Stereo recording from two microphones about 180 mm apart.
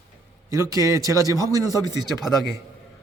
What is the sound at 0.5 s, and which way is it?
A man's voice, 20° right (ahead or behind).